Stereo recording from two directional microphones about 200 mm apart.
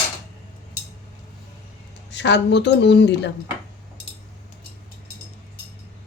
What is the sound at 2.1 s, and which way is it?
A woman's voice, 60° left (ahead or behind).